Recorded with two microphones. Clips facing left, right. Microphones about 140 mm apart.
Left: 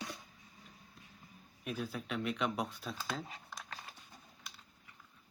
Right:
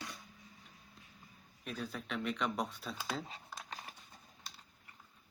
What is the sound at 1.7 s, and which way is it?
Speech, 5° left (ahead or behind).